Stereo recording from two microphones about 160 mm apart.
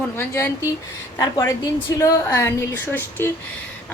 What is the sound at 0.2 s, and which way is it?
A woman's voice, 15° left (ahead or behind).